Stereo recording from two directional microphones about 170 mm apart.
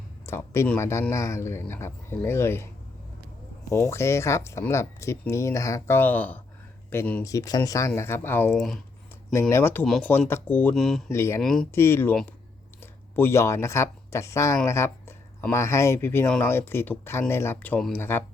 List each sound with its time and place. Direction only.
0.3 s speech: 15° left (ahead or behind)
3.7 s speech: 15° left (ahead or behind)
8.5 s speech: centre (ahead or behind)
9.3 s speech: 15° left (ahead or behind)
11.1 s speech: 15° left (ahead or behind)
11.4 s speech: 5° left (ahead or behind)
11.7 s speech: 15° left (ahead or behind)